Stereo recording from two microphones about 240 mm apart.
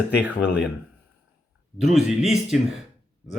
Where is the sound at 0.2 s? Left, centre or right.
Centre.